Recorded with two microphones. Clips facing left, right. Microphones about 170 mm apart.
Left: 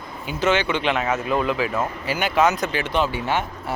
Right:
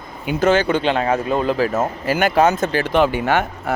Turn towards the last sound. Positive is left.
turn(degrees=-60)  # may be behind; listen again after turning